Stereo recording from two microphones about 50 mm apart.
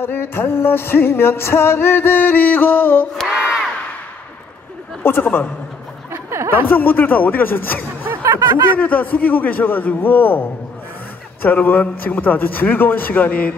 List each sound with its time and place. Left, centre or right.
0.0 s music: left
3.3 s battle cry: centre
5.0 s music: left
6.1 s a sound: right
6.7 s a man's voice: left